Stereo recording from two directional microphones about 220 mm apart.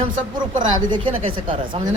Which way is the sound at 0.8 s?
25° right (ahead or behind).